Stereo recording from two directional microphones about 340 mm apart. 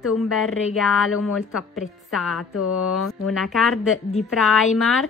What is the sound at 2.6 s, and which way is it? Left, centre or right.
Speech, left.